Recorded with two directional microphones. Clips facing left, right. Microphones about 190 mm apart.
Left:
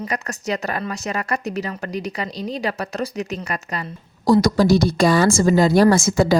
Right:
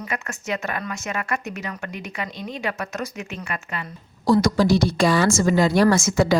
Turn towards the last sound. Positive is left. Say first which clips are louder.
# left 3 dB
turn(degrees=35)  # may be behind; listen again after turning